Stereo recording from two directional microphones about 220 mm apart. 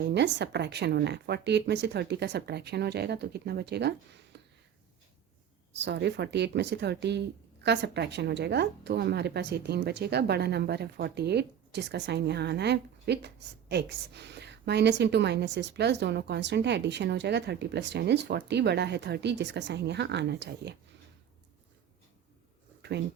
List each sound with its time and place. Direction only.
0.1 s a woman's voice: 50° right (ahead or behind)
5.7 s a woman's voice: 55° right (ahead or behind)